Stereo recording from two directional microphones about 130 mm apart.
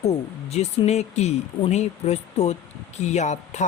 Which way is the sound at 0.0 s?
55° left (ahead or behind).